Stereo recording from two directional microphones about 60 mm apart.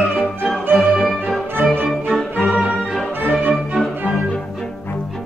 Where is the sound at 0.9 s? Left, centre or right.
Centre.